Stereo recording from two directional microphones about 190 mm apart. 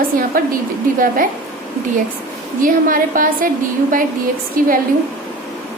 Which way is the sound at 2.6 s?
45° right (ahead or behind).